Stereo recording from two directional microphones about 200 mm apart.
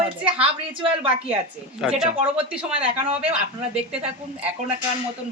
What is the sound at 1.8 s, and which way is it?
Speech, centre (ahead or behind).